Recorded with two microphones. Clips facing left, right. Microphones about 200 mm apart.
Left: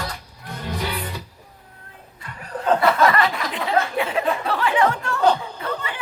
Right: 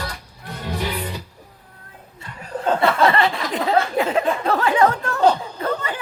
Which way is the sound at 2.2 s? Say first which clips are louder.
Right 2 dB; 25° right (ahead or behind).